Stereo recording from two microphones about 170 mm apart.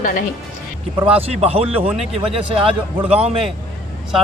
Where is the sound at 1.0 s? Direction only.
35° right (ahead or behind).